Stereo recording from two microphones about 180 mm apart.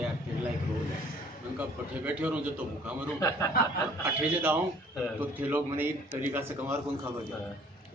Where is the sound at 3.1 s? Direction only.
15° left (ahead or behind).